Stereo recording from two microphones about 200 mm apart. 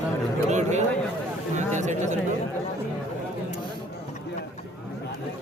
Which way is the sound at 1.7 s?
35° right (ahead or behind).